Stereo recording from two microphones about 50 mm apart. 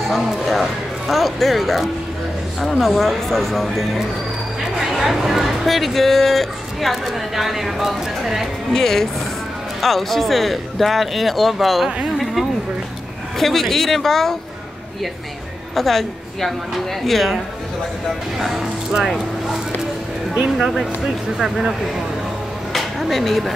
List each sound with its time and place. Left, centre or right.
0.5 s speech: centre
8.7 s speech: centre
13.4 s speech: centre
15.7 s a woman's voice: centre
18.4 s speech: centre
22.7 s a sound: centre